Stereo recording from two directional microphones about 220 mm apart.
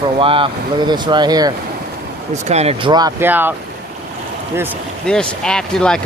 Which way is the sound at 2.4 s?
30° right (ahead or behind).